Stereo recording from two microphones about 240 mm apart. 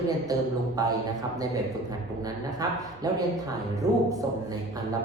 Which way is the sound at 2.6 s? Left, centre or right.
Centre.